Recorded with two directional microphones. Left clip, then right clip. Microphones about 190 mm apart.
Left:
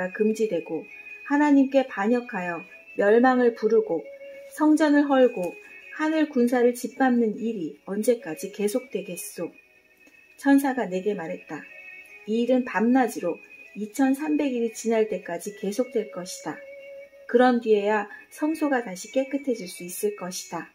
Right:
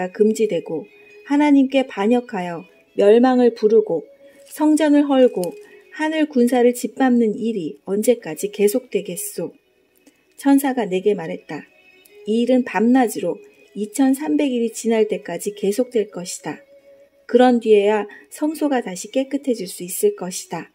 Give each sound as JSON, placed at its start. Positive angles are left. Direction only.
{"t": 0.0, "sound": "speech", "side_deg": -60}